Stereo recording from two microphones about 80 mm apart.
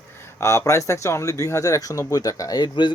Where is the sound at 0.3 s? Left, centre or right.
Left.